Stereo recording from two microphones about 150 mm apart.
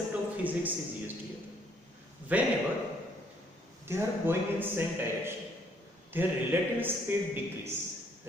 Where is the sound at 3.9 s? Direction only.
15° right (ahead or behind).